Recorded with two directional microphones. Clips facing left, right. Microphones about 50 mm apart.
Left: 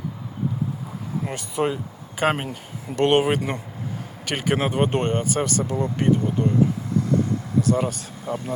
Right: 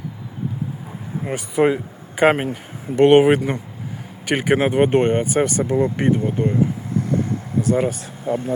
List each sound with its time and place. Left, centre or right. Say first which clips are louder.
1.2 s speech: right 7 dB; right
7.6 s speech: right 4 dB; right